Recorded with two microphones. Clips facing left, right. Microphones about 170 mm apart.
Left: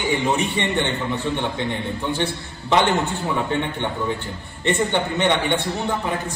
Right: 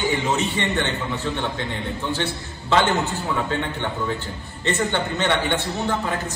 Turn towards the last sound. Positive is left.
turn(degrees=15)  # may be behind; listen again after turning